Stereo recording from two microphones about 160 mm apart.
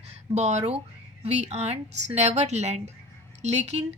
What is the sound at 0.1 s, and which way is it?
A woman's voice, 45° right (ahead or behind).